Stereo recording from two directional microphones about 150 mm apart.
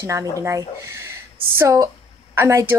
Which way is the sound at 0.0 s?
20° right (ahead or behind).